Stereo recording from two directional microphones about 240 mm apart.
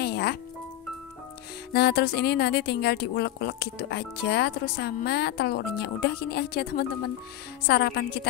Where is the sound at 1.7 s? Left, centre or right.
Left.